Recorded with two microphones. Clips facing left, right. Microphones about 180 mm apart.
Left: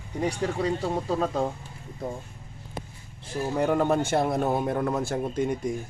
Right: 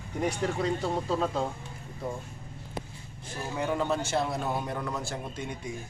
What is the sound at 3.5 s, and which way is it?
Speech, 45° left (ahead or behind).